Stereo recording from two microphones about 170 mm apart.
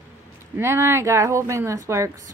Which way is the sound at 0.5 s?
15° right (ahead or behind).